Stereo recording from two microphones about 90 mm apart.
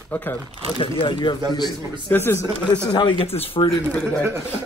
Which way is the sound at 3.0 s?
65° left (ahead or behind).